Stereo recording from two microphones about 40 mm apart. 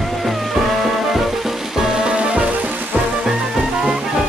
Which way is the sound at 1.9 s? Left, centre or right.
Centre.